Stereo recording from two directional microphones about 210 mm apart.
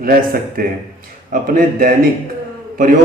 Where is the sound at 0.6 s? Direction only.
45° right (ahead or behind).